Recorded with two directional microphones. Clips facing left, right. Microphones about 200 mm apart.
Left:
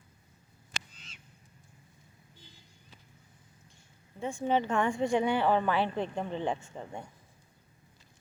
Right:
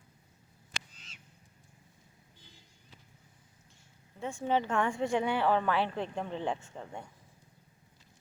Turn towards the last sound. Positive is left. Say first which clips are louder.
# left 2 dB
turn(degrees=0)  # may be behind; listen again after turning